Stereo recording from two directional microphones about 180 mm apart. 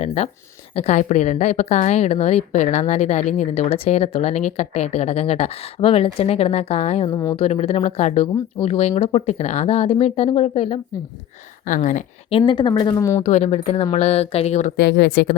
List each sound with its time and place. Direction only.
0.0 s a woman's voice: 35° left (ahead or behind)
11.6 s speech: 45° left (ahead or behind)
12.3 s speech: 30° left (ahead or behind)
13.2 s a woman's voice: 40° left (ahead or behind)
14.8 s speech: 70° left (ahead or behind)